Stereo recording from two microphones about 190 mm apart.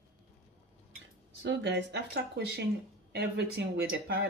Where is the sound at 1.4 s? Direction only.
70° right (ahead or behind).